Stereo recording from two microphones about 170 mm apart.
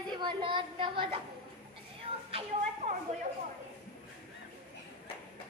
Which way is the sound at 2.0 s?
35° right (ahead or behind).